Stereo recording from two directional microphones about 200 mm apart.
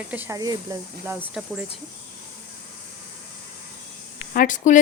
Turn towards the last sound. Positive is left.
turn(degrees=40)  # may be behind; listen again after turning